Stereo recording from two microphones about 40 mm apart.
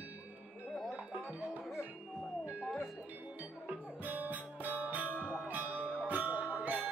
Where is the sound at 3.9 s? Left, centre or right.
Right.